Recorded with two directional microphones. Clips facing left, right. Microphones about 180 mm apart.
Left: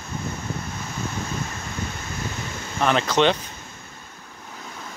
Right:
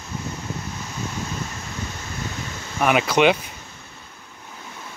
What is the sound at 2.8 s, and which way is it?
Speech, 10° right (ahead or behind).